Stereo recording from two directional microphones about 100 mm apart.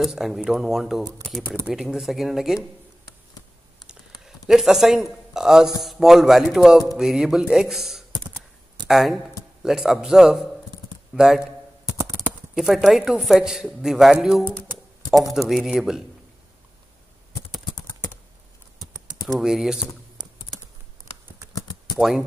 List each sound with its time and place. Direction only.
0.0 s a woman's voice: centre (ahead or behind)
4.5 s a woman's voice: 5° right (ahead or behind)
12.5 s a woman's voice: centre (ahead or behind)
19.2 s a woman's voice: centre (ahead or behind)
21.5 s typewriter: 45° left (ahead or behind)